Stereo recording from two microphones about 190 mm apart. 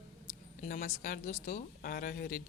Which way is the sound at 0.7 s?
45° left (ahead or behind).